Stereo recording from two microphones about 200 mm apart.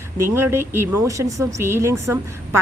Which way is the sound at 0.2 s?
10° right (ahead or behind).